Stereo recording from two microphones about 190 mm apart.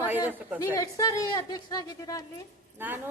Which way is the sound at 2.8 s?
10° right (ahead or behind).